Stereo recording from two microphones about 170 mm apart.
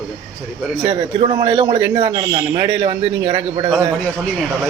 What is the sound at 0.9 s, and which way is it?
A man's voice, 30° right (ahead or behind).